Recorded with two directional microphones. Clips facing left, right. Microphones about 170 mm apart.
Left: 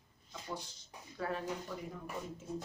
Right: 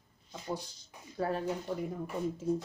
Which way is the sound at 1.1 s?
35° right (ahead or behind).